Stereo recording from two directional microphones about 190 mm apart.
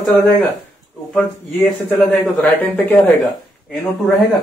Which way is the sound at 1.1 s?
5° left (ahead or behind).